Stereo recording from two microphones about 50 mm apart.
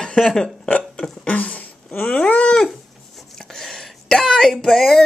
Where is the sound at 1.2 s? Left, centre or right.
Left.